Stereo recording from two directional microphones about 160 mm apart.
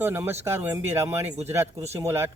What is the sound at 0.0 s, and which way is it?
Speech, 15° right (ahead or behind).